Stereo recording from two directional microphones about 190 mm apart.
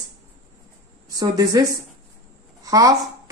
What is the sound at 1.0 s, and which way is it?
A child's voice, 20° right (ahead or behind).